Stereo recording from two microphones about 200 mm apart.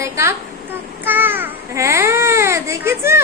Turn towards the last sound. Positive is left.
turn(degrees=-15)  # may be behind; listen again after turning